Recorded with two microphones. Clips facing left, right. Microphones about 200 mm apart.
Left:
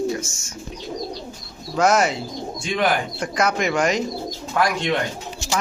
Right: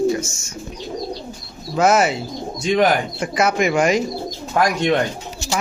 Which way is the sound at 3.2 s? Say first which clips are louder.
Right 3 dB; 5° right (ahead or behind).